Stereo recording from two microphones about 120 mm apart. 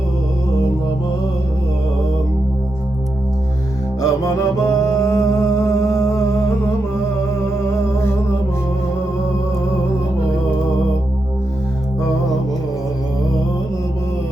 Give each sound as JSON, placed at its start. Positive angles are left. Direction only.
{"t": 4.0, "sound": "music", "side_deg": 30}